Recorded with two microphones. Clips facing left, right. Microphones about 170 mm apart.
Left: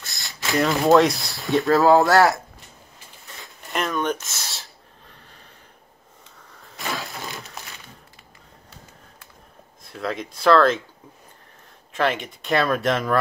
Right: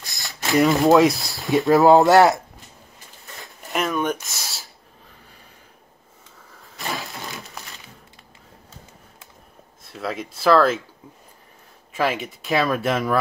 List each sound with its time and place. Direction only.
0.5 s speech: centre (ahead or behind)
1.7 s speech: 20° right (ahead or behind)
3.3 s a sound: centre (ahead or behind)
6.9 s crushing: centre (ahead or behind)
9.8 s speech: 5° right (ahead or behind)
11.9 s speech: 5° right (ahead or behind)